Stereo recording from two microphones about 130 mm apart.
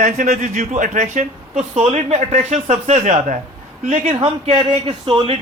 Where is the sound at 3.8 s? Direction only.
80° right.